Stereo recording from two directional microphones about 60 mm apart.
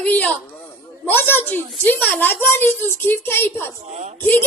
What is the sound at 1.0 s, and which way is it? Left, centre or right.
A woman's voice, left.